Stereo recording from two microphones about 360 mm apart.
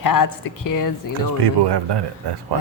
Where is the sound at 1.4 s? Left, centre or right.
Right.